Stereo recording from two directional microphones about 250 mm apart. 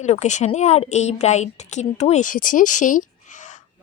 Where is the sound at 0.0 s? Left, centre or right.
Left.